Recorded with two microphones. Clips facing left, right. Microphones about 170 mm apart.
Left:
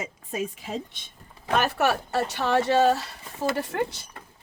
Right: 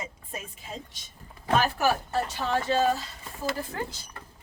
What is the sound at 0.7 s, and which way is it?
A woman's voice, 60° left (ahead or behind).